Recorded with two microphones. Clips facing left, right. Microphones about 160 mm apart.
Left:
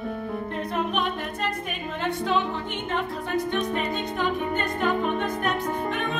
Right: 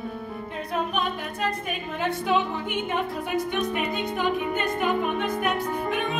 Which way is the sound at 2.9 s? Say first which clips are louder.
Left 2 dB; 10° right (ahead or behind).